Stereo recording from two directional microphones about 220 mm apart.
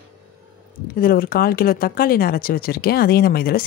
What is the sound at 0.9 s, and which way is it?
Speech, 40° left (ahead or behind).